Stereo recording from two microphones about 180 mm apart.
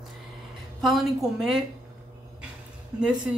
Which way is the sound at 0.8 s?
Centre (ahead or behind).